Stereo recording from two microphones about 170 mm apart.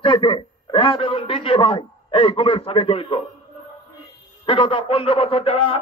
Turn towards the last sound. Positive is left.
turn(degrees=35)  # may be behind; listen again after turning